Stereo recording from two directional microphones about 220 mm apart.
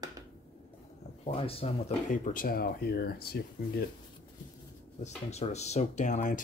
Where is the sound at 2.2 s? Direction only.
40° left (ahead or behind).